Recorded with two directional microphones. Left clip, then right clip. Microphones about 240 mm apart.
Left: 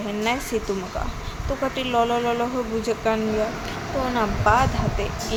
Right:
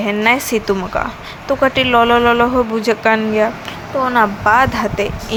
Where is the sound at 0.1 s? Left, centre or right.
Centre.